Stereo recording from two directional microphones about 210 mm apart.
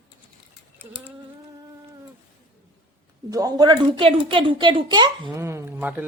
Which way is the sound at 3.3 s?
15° right (ahead or behind).